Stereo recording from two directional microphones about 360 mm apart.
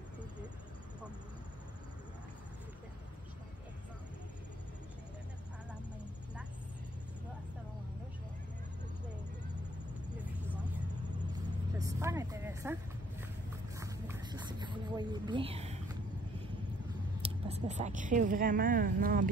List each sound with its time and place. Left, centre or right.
11.3 s vehicle: centre
13.7 s a sound: centre
17.2 s a woman's voice: centre